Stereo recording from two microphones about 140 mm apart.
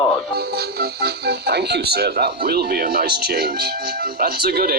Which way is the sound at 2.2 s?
90° right.